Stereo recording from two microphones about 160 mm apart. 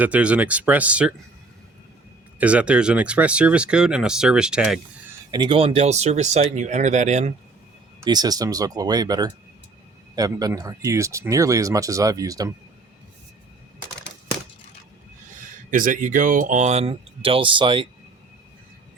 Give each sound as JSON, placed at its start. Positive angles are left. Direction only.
{"t": 0.0, "sound": "speech", "side_deg": -10}
{"t": 2.4, "sound": "speech", "side_deg": -10}
{"t": 5.3, "sound": "speech", "side_deg": -30}
{"t": 8.0, "sound": "speech", "side_deg": -25}
{"t": 15.7, "sound": "speech", "side_deg": -55}